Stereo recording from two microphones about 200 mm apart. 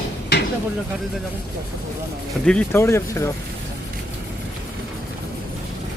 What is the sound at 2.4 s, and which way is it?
Speech, 5° left (ahead or behind).